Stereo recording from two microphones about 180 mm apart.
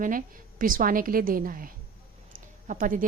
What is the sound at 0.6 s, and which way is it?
A woman's voice, 50° right (ahead or behind).